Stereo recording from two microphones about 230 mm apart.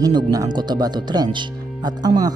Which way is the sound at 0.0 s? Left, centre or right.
Centre.